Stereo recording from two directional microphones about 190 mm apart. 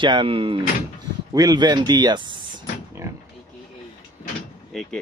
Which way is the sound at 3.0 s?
15° right (ahead or behind).